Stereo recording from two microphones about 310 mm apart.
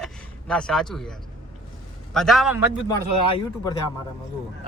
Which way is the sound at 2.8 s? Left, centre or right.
Centre.